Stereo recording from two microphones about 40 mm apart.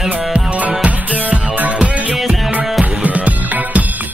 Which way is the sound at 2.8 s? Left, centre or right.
Right.